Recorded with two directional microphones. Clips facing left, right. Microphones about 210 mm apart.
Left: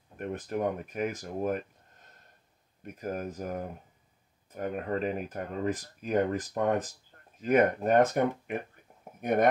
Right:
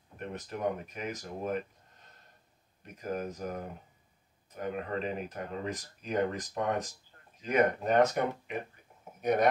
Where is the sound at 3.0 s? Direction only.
50° left (ahead or behind).